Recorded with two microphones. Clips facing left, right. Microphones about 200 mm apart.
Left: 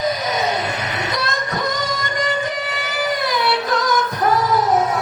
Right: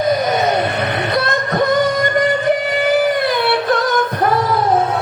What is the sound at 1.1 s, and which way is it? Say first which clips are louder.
Music: right 6 dB; 60° right (ahead or behind).